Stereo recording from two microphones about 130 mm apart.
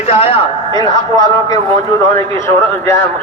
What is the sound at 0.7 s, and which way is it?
Speech, 30° left (ahead or behind).